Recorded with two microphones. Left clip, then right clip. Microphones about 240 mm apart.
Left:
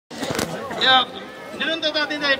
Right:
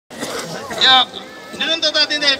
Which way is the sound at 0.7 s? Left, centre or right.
Centre.